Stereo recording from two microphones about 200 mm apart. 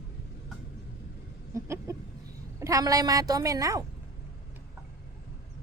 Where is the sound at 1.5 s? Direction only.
15° right (ahead or behind).